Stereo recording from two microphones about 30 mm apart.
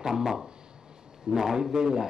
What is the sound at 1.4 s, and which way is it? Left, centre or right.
Speech, centre.